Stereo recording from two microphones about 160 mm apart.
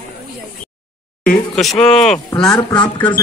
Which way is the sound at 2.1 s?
30° left (ahead or behind).